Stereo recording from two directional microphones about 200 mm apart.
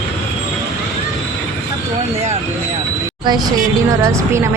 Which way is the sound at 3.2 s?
20° right (ahead or behind).